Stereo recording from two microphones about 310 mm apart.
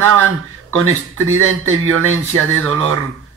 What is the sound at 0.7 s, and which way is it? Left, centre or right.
Speech, right.